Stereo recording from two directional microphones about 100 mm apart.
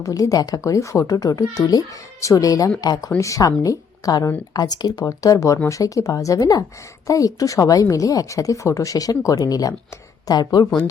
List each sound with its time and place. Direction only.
0.0 s a woman's voice: 35° left (ahead or behind)